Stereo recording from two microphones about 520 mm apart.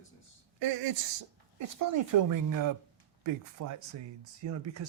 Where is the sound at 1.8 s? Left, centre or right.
Right.